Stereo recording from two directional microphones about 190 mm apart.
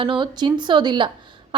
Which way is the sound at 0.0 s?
25° right (ahead or behind).